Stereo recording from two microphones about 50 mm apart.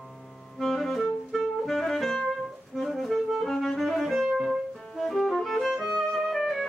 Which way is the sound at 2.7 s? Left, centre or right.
Centre.